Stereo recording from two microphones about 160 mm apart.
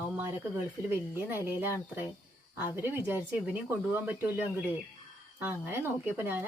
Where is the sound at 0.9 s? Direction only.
15° right (ahead or behind).